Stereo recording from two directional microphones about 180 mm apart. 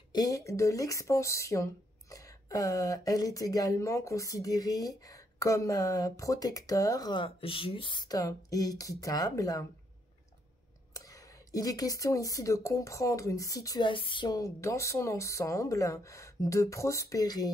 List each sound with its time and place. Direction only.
0.1 s speech: 20° left (ahead or behind)
10.9 s speech: 20° left (ahead or behind)